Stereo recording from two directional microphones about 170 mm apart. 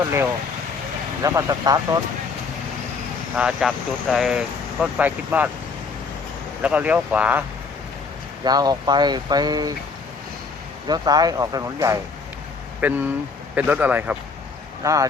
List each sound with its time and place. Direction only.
1.2 s speech: 20° right (ahead or behind)
3.3 s speech: 5° right (ahead or behind)
6.6 s speech: 10° right (ahead or behind)
8.4 s speech: 25° right (ahead or behind)
10.8 s speech: 25° right (ahead or behind)
14.8 s speech: 20° right (ahead or behind)